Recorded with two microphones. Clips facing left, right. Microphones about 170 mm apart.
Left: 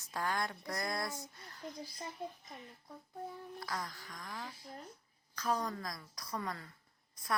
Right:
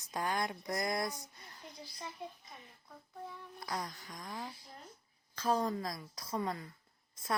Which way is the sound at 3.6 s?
20° right (ahead or behind).